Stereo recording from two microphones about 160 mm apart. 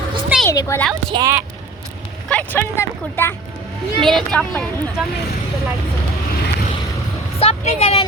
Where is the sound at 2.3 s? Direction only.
10° left (ahead or behind).